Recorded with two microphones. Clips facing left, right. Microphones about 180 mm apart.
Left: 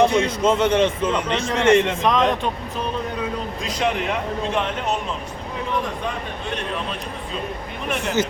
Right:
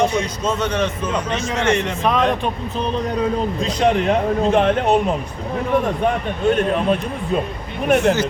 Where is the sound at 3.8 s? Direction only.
40° right (ahead or behind).